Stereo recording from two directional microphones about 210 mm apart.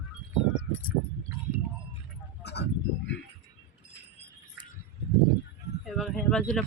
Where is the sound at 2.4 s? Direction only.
55° left (ahead or behind).